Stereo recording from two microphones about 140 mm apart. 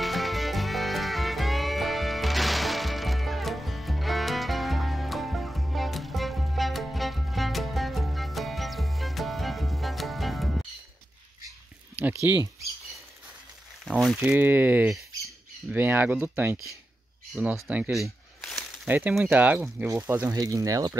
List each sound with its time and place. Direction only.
0.0 s music: centre (ahead or behind)
12.0 s speech: 15° right (ahead or behind)
13.8 s speech: centre (ahead or behind)
14.2 s speech: 10° right (ahead or behind)
17.6 s speech: 10° right (ahead or behind)
17.9 s a sound: centre (ahead or behind)
18.9 s speech: 10° right (ahead or behind)